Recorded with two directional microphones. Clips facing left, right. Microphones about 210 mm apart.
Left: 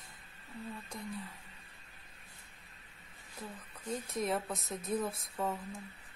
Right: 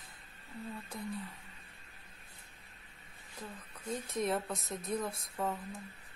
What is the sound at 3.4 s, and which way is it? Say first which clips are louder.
A woman's voice: even; centre (ahead or behind).